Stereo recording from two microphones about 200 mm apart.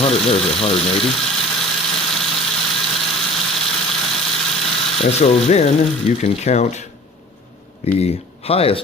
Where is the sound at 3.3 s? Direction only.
Centre (ahead or behind).